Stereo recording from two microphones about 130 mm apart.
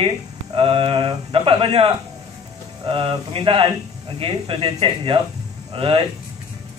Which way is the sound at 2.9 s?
45° right (ahead or behind).